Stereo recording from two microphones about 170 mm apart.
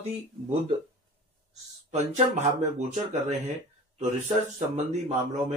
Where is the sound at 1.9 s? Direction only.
40° right (ahead or behind).